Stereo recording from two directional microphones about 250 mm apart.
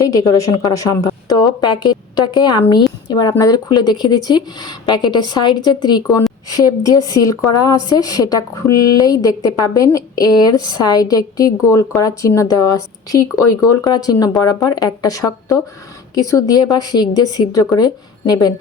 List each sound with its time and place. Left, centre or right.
0.0 s a woman's voice: centre